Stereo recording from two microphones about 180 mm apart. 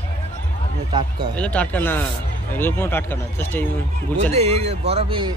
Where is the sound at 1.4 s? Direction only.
5° left (ahead or behind).